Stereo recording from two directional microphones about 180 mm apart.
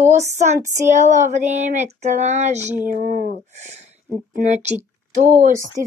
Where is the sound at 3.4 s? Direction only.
40° right (ahead or behind).